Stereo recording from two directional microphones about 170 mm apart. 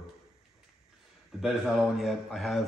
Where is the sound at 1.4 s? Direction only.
Centre (ahead or behind).